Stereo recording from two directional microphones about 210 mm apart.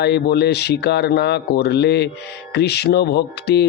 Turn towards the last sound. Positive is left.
turn(degrees=50)  # may be behind; listen again after turning